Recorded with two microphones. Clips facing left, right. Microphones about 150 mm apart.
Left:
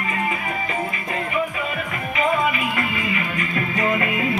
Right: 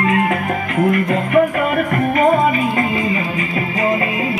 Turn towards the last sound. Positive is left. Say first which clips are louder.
# right 4 dB
turn(degrees=-25)  # may be behind; listen again after turning